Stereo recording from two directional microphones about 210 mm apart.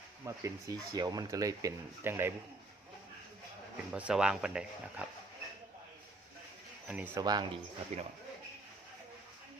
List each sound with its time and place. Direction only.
0.3 s speech: 15° right (ahead or behind)
3.9 s speech: 5° right (ahead or behind)
6.8 s speech: 5° right (ahead or behind)
7.9 s speech: 35° right (ahead or behind)